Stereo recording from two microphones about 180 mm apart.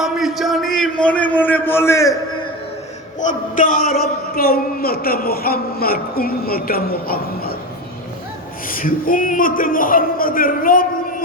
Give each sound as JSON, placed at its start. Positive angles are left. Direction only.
{"t": 0.0, "sound": "a sound", "side_deg": 0}
{"t": 3.2, "sound": "a man's voice", "side_deg": 45}
{"t": 8.6, "sound": "a man's voice", "side_deg": 50}